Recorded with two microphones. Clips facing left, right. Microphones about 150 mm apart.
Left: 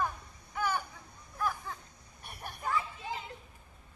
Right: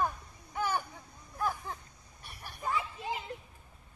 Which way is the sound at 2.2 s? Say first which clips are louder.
Left 4 dB; 55° left (ahead or behind).